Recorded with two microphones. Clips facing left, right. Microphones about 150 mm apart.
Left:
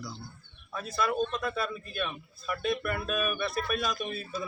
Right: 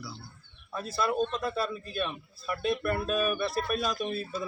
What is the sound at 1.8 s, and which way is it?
Speech, 35° right (ahead or behind).